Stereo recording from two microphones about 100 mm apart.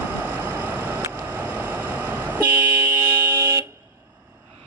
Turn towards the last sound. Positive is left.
turn(degrees=-30)  # may be behind; listen again after turning